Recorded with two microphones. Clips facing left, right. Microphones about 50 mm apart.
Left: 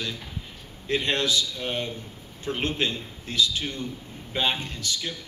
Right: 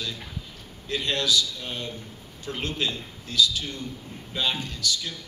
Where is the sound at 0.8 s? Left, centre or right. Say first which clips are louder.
Left 2 dB; left.